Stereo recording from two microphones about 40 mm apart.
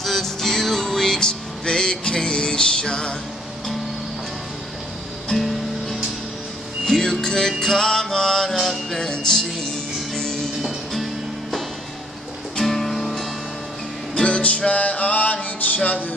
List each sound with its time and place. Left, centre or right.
0.0 s music: centre; by 3.2 s left
5.3 s music: centre
8.5 s music: centre
12.5 s music: centre
14.2 s music: left